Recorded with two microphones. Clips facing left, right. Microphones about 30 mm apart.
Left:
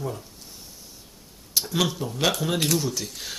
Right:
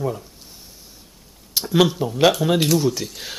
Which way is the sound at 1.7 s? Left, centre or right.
Centre.